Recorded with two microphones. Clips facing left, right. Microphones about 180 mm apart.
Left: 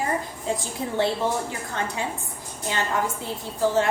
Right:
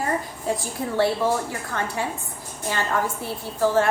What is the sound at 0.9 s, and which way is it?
A woman's voice, 20° left (ahead or behind).